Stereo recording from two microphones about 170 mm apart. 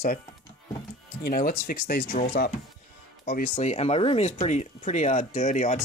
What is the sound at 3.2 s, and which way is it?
Speech, 55° left (ahead or behind).